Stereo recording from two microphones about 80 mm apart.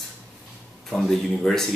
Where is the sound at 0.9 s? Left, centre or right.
Centre.